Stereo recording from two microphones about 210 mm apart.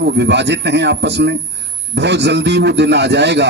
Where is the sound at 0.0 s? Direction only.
55° right (ahead or behind).